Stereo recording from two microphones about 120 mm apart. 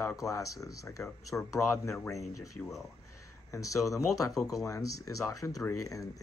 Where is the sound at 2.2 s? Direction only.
Centre (ahead or behind).